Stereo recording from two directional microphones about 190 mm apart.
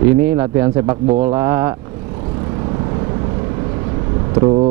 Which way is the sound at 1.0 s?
35° right (ahead or behind).